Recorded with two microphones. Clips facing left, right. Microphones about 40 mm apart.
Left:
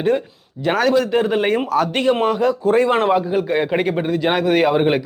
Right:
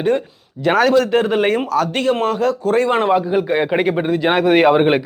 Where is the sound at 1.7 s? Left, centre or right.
Centre.